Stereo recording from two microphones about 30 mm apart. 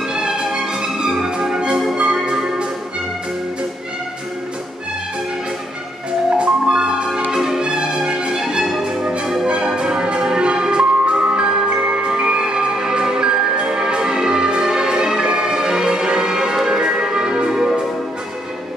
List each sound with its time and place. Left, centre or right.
0.1 s music: right
6.3 s music: right
7.2 s music: centre
7.6 s music: right
9.2 s music: centre
9.8 s music: right
12.1 s music: right